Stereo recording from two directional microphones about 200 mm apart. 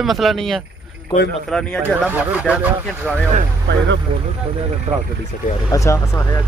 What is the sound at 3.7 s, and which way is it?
Speech, 60° right (ahead or behind).